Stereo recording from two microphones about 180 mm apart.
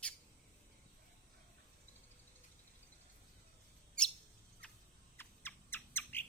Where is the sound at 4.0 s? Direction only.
5° left (ahead or behind).